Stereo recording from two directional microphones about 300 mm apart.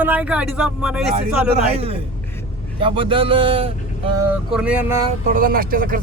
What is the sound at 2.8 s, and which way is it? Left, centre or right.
Speech, centre.